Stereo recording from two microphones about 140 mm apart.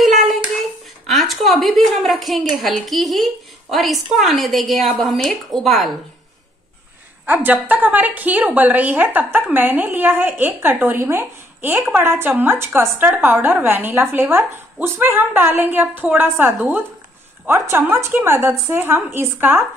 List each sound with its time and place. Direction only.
0.0 s hands: centre (ahead or behind)
0.6 s a sound: centre (ahead or behind)
2.6 s a woman's voice: centre (ahead or behind)
7.2 s a woman's voice: 15° right (ahead or behind)